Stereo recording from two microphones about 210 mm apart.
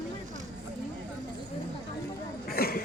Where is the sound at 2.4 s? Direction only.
45° left (ahead or behind).